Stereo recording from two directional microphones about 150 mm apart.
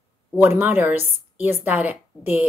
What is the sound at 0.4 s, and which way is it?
Speech, 15° right (ahead or behind).